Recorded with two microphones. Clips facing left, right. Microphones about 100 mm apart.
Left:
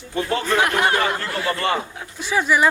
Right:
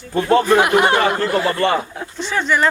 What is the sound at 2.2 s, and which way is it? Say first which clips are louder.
Speech: even; 10° left (ahead or behind).